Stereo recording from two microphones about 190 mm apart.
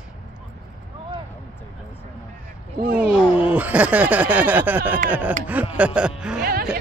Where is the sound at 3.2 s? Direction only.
25° left (ahead or behind).